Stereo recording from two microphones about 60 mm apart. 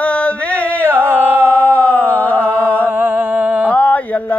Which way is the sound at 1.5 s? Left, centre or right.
Left.